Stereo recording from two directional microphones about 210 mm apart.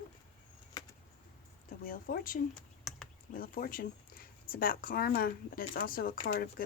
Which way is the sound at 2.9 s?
Centre (ahead or behind).